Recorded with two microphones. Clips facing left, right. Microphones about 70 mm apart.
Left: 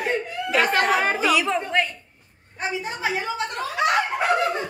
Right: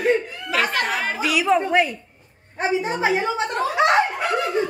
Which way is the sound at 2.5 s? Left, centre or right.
Right.